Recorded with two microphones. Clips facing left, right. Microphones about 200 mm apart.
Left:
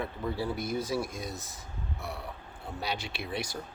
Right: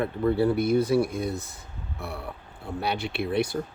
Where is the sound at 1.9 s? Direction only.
60° right (ahead or behind).